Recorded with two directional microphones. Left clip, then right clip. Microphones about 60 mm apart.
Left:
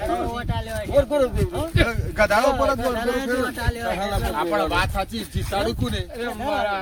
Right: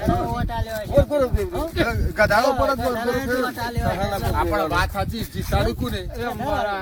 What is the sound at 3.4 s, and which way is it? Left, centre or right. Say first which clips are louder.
Speech: right 1 dB; left.